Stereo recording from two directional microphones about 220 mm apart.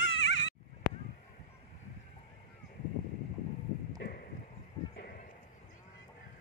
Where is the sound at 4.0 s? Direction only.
45° left (ahead or behind).